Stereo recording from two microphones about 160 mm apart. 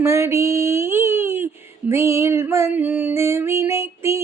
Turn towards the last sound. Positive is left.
turn(degrees=-15)  # may be behind; listen again after turning